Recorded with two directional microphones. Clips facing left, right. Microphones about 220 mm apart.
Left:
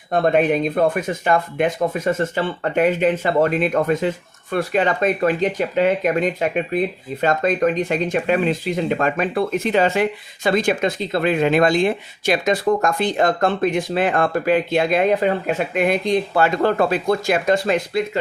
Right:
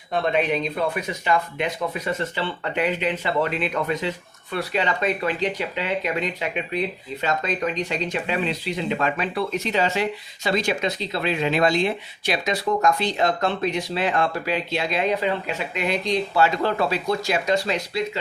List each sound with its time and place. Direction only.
0.1 s speech: 50° left (ahead or behind)